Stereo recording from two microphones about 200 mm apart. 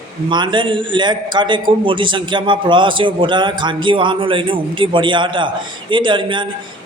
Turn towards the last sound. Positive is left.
turn(degrees=-25)  # may be behind; listen again after turning